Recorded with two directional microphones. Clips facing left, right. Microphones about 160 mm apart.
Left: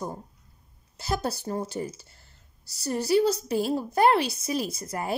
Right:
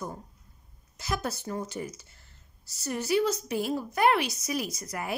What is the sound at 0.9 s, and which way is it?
A woman's voice, 30° left (ahead or behind).